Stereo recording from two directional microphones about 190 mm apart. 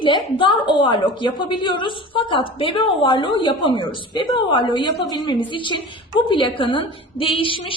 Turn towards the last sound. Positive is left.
turn(degrees=25)  # may be behind; listen again after turning